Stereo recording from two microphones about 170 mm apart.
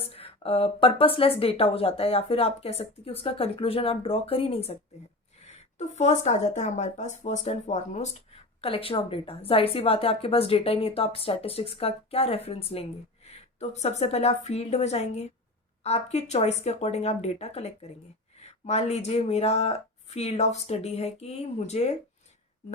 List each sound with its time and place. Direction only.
0.0 s speech: 35° left (ahead or behind)